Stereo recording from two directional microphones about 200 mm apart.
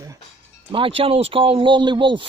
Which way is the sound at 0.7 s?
25° right (ahead or behind).